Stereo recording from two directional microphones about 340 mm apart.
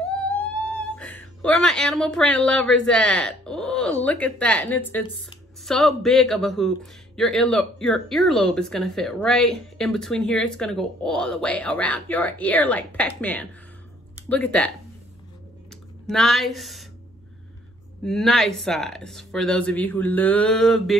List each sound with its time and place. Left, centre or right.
0.1 s speech: centre
15.7 s speech: centre
18.0 s speech: centre